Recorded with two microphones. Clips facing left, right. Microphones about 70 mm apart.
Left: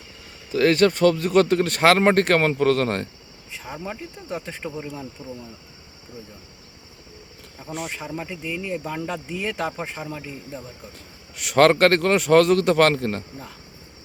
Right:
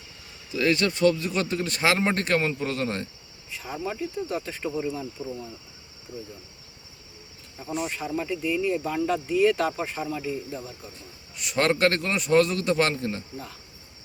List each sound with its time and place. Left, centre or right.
0.5 s speech: left
3.5 s speech: left
5.2 s speech: centre
7.9 s speech: left
11.3 s a man's voice: left